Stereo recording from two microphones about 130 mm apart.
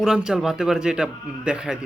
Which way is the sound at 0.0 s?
5° right (ahead or behind).